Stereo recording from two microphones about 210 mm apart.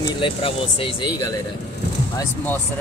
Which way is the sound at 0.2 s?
25° left (ahead or behind).